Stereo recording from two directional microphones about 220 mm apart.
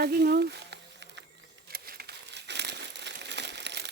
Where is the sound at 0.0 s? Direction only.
45° right (ahead or behind).